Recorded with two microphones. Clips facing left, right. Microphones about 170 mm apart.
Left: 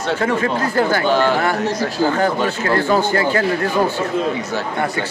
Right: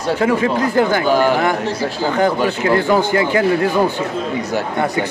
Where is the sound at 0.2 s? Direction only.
15° right (ahead or behind).